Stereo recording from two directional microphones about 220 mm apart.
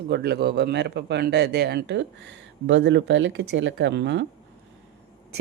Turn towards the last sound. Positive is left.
turn(degrees=-55)  # may be behind; listen again after turning